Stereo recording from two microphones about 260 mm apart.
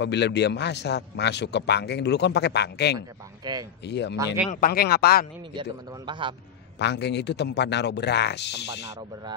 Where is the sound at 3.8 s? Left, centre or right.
Left.